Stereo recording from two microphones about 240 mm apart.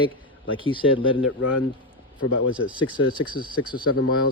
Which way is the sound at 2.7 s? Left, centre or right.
Centre.